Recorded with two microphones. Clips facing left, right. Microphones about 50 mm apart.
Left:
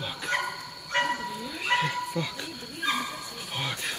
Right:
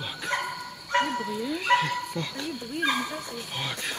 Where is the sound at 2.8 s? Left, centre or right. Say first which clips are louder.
Right 2 dB; right.